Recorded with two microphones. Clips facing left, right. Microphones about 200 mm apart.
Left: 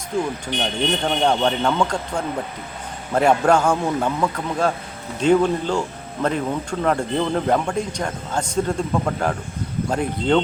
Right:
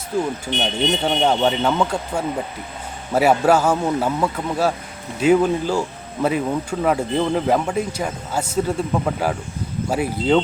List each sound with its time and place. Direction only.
0.1 s speech: 5° right (ahead or behind)
0.5 s speech: 25° right (ahead or behind)
1.0 s speech: 5° right (ahead or behind)